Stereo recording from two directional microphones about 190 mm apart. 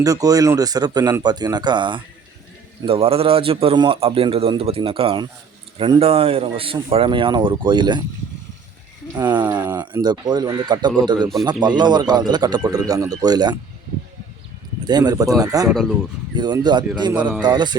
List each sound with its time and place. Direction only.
0.0 s a man's voice: 20° right (ahead or behind)
9.1 s a man's voice: 20° right (ahead or behind)
14.8 s a man's voice: 20° right (ahead or behind)
15.7 s speech: centre (ahead or behind)
16.3 s a man's voice: 20° right (ahead or behind)